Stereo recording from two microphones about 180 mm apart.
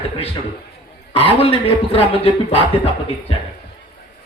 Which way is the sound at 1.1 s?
35° left (ahead or behind).